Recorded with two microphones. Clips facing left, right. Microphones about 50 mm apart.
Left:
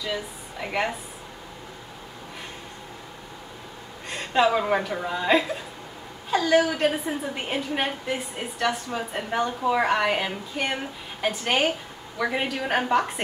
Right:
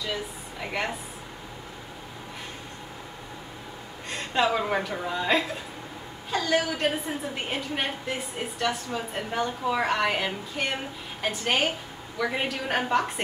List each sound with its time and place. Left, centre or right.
0.1 s a woman's voice: centre
4.1 s a woman's voice: centre